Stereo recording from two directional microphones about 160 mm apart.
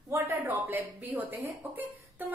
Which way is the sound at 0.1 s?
15° right (ahead or behind).